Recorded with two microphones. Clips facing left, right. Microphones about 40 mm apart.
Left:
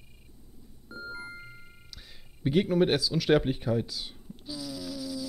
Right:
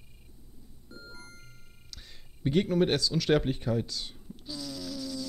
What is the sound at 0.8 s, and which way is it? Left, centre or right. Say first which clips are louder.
Music: left 9 dB; left.